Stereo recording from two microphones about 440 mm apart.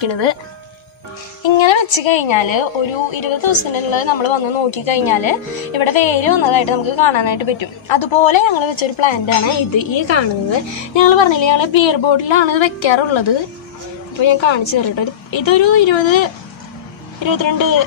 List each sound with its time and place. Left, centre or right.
0.0 s speech: left
1.4 s a woman's voice: left